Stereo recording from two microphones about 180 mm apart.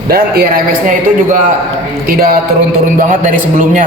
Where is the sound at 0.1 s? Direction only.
55° right (ahead or behind).